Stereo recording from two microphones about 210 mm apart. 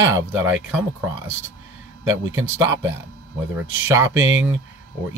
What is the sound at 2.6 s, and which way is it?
Speech, 15° right (ahead or behind).